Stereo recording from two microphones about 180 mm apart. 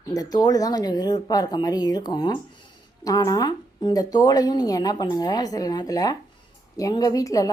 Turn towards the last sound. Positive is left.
turn(degrees=20)  # may be behind; listen again after turning